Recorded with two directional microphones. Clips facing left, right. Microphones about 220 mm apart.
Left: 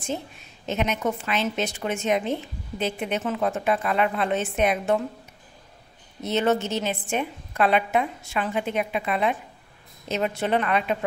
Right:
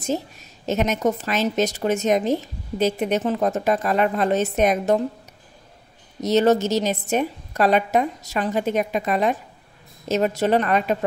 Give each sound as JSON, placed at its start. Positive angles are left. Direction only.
{"t": 0.0, "sound": "a woman's voice", "side_deg": -40}
{"t": 6.2, "sound": "a woman's voice", "side_deg": -40}